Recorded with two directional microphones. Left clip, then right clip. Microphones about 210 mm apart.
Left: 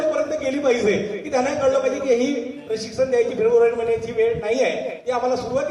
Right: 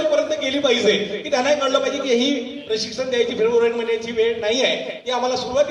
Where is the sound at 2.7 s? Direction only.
35° right (ahead or behind).